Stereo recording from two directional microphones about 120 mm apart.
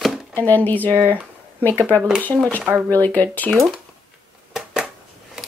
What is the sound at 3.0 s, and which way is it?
Speech, 15° left (ahead or behind).